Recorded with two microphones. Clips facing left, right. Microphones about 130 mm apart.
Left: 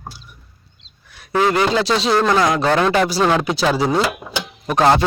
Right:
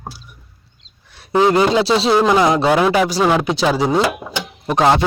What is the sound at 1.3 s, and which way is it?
Speech, 25° right (ahead or behind).